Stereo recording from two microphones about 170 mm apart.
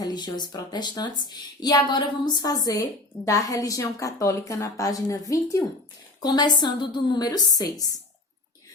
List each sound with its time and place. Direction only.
0.0 s a woman's voice: 25° left (ahead or behind)